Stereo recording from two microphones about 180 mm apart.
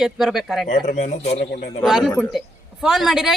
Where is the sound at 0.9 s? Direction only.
45° left (ahead or behind).